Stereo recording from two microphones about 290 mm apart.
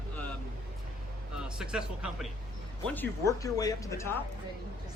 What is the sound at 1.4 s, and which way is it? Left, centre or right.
Speech, centre.